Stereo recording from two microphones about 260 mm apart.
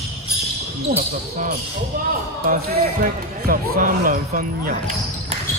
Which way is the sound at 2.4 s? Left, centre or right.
Right.